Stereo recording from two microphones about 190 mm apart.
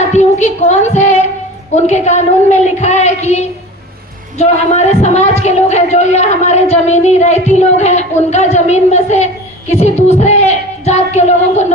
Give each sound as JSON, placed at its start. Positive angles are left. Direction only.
{"t": 0.1, "sound": "a woman's voice", "side_deg": 35}